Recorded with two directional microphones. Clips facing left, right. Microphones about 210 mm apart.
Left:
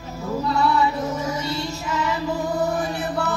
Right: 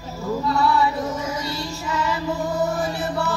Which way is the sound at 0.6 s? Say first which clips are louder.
Left 1 dB; 20° left (ahead or behind).